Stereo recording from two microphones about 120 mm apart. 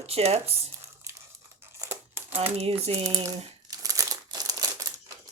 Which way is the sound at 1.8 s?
20° right (ahead or behind).